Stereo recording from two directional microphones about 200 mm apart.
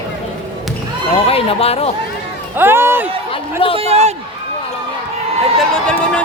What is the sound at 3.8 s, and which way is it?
Speech, 35° right (ahead or behind).